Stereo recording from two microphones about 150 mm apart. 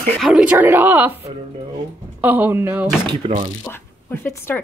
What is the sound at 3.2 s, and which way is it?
Speech, 35° right (ahead or behind).